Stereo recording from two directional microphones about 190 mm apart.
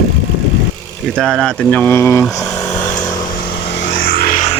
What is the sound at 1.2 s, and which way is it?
Speech, centre (ahead or behind).